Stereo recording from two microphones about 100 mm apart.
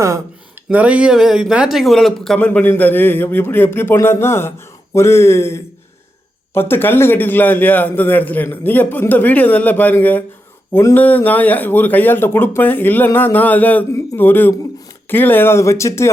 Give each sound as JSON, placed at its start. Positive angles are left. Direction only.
{"t": 0.7, "sound": "a man's voice", "side_deg": -15}
{"t": 2.4, "sound": "a man's voice", "side_deg": 15}
{"t": 13.1, "sound": "a sound", "side_deg": 20}
{"t": 14.2, "sound": "a man's voice", "side_deg": 20}